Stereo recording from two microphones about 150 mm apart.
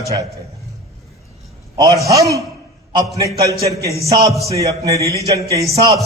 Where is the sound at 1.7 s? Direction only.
20° right (ahead or behind).